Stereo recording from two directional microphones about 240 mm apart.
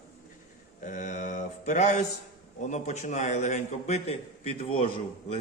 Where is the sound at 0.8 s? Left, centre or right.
Left.